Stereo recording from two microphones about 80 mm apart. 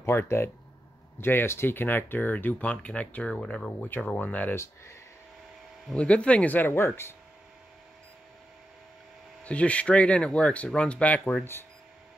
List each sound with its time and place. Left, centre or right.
0.0 s speech: left
5.9 s speech: centre
9.4 s speech: centre